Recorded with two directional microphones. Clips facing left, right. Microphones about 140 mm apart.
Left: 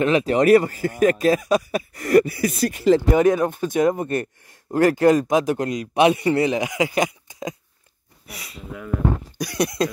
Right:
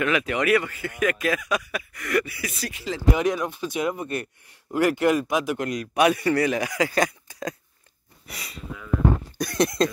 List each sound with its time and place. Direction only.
0.0 s speech: 30° left (ahead or behind)
5.7 s speech: 25° left (ahead or behind)
8.3 s speech: centre (ahead or behind)
9.6 s speech: centre (ahead or behind)